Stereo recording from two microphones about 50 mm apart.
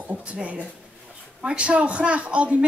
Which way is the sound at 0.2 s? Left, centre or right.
Right.